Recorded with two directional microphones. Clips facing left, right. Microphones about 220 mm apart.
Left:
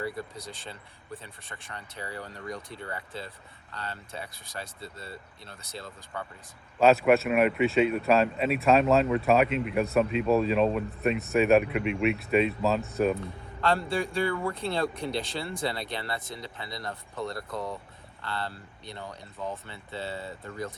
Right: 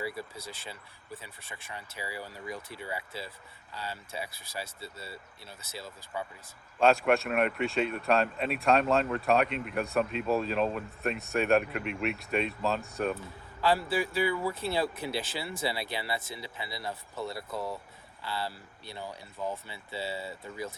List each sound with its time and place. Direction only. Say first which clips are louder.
0.2 s speech: left 2 dB; 5° right (ahead or behind)